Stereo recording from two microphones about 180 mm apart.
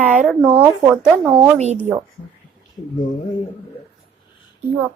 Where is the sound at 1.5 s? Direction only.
40° right (ahead or behind).